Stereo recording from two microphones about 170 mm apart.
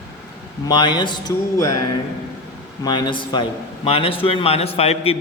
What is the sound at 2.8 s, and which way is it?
A man's voice, 25° left (ahead or behind).